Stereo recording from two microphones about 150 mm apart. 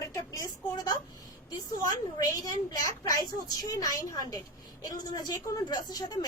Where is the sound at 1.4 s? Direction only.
25° left (ahead or behind).